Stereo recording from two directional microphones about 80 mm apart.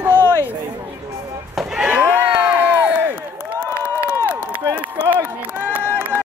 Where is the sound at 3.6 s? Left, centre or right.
Right.